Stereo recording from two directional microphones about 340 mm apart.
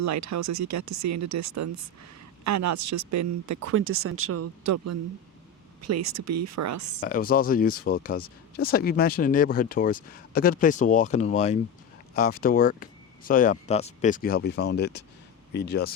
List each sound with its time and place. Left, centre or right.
0.0 s speech: right
7.0 s speech: left